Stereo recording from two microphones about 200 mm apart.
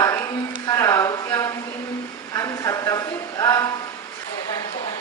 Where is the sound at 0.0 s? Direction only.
15° left (ahead or behind).